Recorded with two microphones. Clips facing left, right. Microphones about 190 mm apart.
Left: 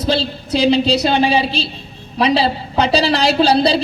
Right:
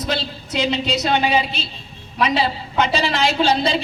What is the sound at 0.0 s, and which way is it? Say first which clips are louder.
A woman's voice: left 6 dB; 30° left (ahead or behind).